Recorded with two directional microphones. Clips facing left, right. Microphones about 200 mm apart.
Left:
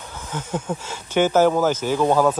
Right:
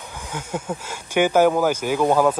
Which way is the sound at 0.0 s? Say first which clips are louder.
Left 1 dB; 10° right (ahead or behind).